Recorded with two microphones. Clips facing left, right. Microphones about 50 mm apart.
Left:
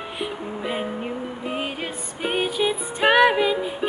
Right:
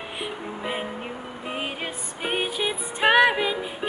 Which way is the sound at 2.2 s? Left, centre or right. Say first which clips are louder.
Left 4 dB; centre.